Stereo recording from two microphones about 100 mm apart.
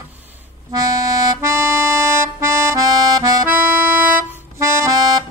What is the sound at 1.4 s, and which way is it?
Music, 25° right (ahead or behind).